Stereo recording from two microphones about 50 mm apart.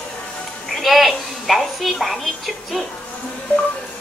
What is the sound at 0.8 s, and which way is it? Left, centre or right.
A woman's voice, centre.